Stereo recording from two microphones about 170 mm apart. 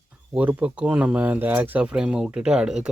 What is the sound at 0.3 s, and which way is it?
Speech, 5° right (ahead or behind).